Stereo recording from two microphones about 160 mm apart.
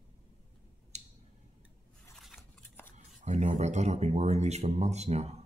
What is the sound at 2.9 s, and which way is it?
Speech, 45° right (ahead or behind).